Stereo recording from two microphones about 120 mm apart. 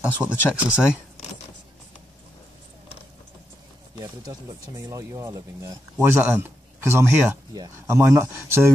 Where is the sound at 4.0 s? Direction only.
30° right (ahead or behind).